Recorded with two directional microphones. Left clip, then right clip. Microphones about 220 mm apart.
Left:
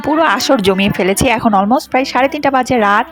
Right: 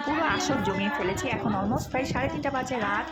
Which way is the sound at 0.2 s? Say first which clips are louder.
Left 16 dB; 45° left (ahead or behind).